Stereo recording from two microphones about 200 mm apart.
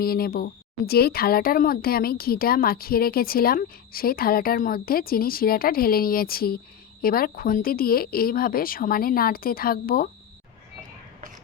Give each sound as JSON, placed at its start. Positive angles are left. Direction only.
{"t": 0.0, "sound": "speech", "side_deg": 50}